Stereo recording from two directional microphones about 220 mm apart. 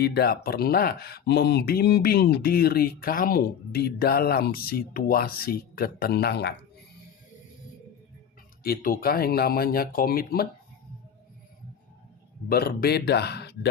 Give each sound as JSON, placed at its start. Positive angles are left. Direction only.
{"t": 0.0, "sound": "speech", "side_deg": 45}
{"t": 8.6, "sound": "speech", "side_deg": 40}
{"t": 12.5, "sound": "speech", "side_deg": 45}